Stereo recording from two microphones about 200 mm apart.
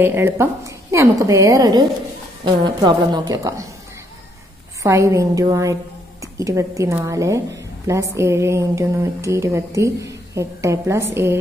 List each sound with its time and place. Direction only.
0.0 s a woman's voice: 10° right (ahead or behind)
4.8 s a woman's voice: 15° right (ahead or behind)